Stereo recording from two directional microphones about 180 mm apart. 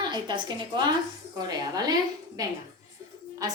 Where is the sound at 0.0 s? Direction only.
25° right (ahead or behind).